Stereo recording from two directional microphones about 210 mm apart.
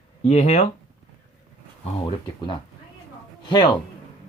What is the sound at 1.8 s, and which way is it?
Speech, 25° left (ahead or behind).